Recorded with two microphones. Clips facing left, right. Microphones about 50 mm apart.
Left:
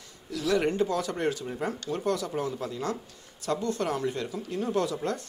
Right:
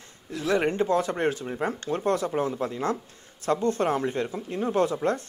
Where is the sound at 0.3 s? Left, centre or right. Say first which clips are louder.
Right 1 dB; right.